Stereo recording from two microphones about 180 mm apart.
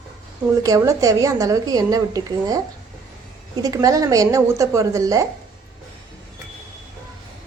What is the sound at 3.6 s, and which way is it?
A woman's voice, 20° right (ahead or behind).